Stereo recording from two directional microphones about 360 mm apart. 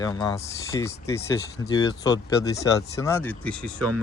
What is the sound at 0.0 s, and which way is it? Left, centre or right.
Speech, centre.